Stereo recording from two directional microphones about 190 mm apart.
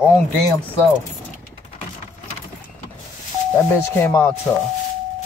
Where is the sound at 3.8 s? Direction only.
15° left (ahead or behind).